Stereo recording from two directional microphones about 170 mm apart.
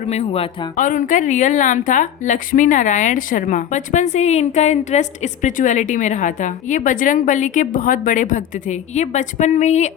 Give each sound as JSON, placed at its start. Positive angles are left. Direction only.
{"t": 0.1, "sound": "speech", "side_deg": 35}
{"t": 0.8, "sound": "a woman's voice", "side_deg": 50}